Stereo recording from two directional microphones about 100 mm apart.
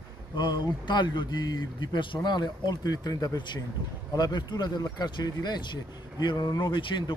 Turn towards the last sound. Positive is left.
turn(degrees=50)  # may be behind; listen again after turning